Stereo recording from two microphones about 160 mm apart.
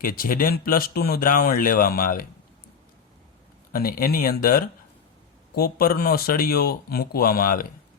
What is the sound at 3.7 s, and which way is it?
Speech, 65° left (ahead or behind).